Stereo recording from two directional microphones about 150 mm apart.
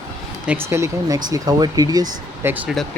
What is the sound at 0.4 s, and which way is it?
Speech, 15° right (ahead or behind).